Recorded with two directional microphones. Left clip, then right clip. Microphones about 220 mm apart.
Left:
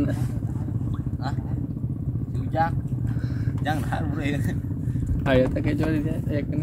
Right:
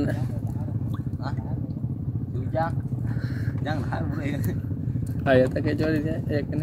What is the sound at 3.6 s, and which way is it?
Vehicle, 50° left (ahead or behind).